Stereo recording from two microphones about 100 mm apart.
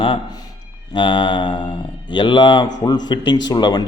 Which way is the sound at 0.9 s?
50° left (ahead or behind).